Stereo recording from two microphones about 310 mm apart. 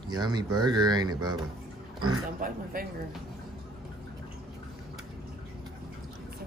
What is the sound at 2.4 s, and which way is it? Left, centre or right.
Speech, right.